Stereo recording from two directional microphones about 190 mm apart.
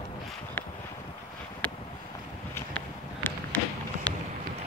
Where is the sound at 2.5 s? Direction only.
10° left (ahead or behind).